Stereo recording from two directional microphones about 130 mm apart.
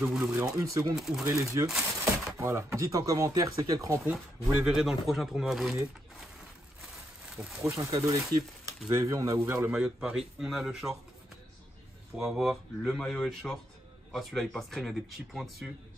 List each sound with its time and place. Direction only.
0.2 s speech: 20° right (ahead or behind)
0.9 s speech: centre (ahead or behind)
1.2 s speech: 25° right (ahead or behind)
1.7 s a sound: centre (ahead or behind)
2.3 s speech: 20° right (ahead or behind)
4.6 s speech: centre (ahead or behind)
7.3 s speech: centre (ahead or behind)
7.7 s speech: 25° right (ahead or behind)
9.7 s speech: 5° right (ahead or behind)
12.2 s speech: 5° right (ahead or behind)